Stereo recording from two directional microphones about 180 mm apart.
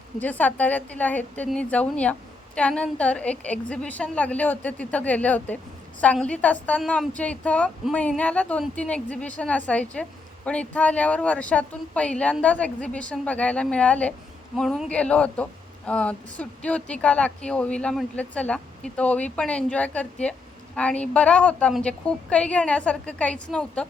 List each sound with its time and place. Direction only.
0.2 s speech: 10° left (ahead or behind)